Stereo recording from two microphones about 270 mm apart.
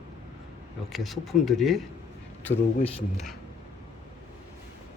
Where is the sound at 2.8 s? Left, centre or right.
Left.